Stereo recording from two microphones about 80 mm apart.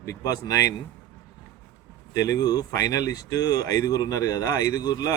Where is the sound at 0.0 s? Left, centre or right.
Left.